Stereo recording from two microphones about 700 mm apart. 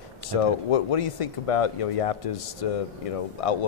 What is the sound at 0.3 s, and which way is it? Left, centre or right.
Speech, left.